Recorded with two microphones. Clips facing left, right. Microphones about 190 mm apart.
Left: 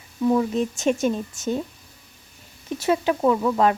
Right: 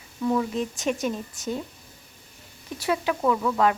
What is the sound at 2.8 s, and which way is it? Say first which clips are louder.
Speech: left 4 dB; 25° left (ahead or behind).